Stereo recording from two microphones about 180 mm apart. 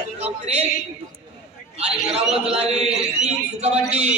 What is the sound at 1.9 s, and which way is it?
A man's voice, 35° right (ahead or behind).